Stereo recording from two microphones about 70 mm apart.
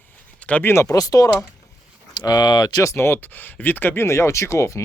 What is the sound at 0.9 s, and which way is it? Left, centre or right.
Speech, left.